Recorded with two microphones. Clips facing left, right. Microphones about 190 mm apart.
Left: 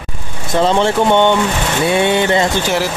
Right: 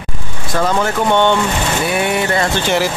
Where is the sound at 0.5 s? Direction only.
25° left (ahead or behind).